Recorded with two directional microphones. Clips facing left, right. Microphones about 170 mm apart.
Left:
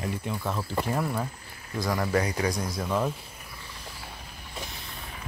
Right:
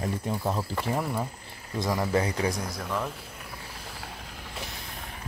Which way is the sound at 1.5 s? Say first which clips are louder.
Right 1 dB; 25° right (ahead or behind).